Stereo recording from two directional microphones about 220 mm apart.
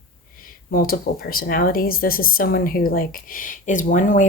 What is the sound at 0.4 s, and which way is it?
Speech, 40° left (ahead or behind).